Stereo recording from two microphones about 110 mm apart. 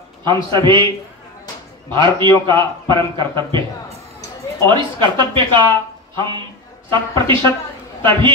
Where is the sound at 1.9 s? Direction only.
45° right (ahead or behind).